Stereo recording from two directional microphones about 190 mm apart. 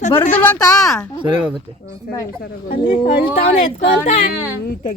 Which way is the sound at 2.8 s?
25° left (ahead or behind).